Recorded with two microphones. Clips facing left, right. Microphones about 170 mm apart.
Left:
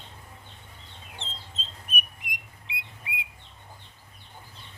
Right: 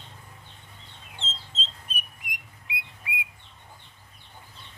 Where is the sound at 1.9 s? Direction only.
20° left (ahead or behind).